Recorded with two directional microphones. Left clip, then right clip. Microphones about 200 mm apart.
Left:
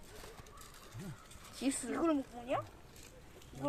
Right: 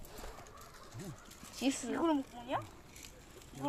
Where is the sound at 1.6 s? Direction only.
10° right (ahead or behind).